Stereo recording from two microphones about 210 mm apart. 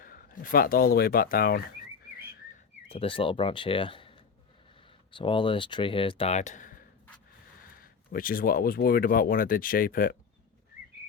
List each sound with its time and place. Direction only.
0.0 s speech: 40° left (ahead or behind)
2.9 s speech: 25° left (ahead or behind)
7.8 s speech: 45° left (ahead or behind)